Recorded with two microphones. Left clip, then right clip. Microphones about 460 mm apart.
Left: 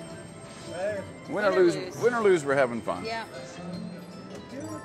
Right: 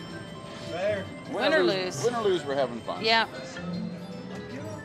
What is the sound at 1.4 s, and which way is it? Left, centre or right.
Speech, right.